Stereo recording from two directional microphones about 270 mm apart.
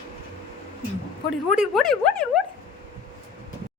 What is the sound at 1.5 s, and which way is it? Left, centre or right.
Speech, centre.